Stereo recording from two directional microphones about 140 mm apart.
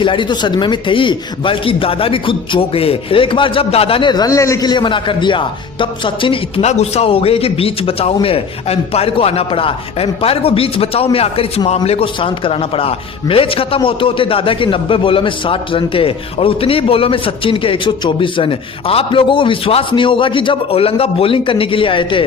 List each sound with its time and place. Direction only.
0.0 s a man's voice: 35° left (ahead or behind)
6.7 s a man's voice: 50° left (ahead or behind)